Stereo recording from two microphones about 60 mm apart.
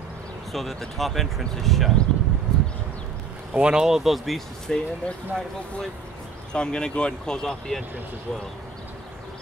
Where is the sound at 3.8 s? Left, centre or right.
Centre.